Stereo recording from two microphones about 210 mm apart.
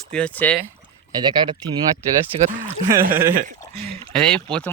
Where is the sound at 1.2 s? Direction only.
20° right (ahead or behind).